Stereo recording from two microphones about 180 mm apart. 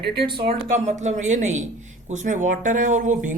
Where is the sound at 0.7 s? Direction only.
40° right (ahead or behind).